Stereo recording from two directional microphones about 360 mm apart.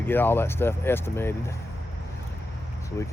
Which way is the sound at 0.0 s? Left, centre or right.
Centre.